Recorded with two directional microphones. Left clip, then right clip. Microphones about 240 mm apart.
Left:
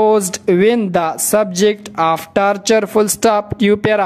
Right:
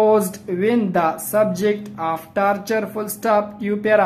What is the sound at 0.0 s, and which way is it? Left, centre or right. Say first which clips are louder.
A woman's voice: left 3 dB; left.